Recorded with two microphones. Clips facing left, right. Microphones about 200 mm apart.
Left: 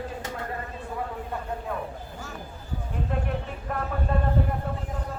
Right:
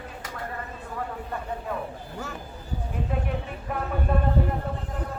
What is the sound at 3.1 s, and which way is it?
Vehicle, 5° right (ahead or behind).